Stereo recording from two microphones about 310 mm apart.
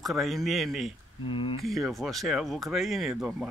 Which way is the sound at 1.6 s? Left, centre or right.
Centre.